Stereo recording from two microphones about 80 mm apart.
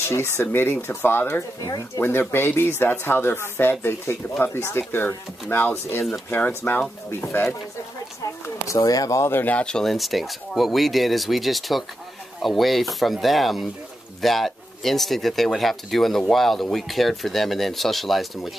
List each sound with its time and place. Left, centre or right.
0.1 s speech: left
8.6 s speech: left
9.2 s speech: left; by 18.5 s centre